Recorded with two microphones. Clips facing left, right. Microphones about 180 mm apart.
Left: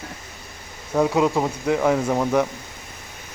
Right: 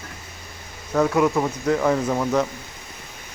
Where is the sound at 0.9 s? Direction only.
15° left (ahead or behind).